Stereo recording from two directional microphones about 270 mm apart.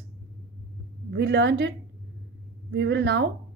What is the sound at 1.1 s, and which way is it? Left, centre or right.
Speech, right.